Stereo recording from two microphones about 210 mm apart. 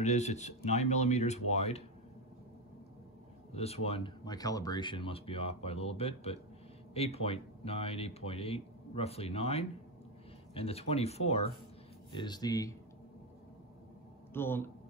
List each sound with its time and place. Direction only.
0.0 s speech: 35° left (ahead or behind)
3.5 s speech: 30° left (ahead or behind)
14.3 s speech: 10° left (ahead or behind)